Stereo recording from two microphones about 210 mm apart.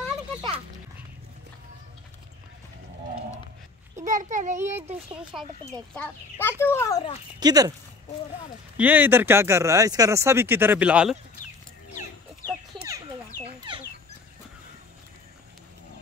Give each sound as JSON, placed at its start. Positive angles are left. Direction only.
{"t": 4.0, "sound": "a sound", "side_deg": -35}
{"t": 4.6, "sound": "speech", "side_deg": -10}
{"t": 5.9, "sound": "speech", "side_deg": 10}
{"t": 7.3, "sound": "speech", "side_deg": -20}
{"t": 8.7, "sound": "speech", "side_deg": -5}
{"t": 12.7, "sound": "bird", "side_deg": -15}